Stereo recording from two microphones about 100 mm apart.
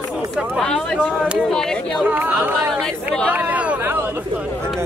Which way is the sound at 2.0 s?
20° right (ahead or behind).